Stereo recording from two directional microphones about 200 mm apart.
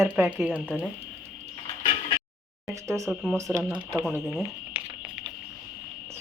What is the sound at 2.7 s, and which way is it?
Speech, 15° right (ahead or behind).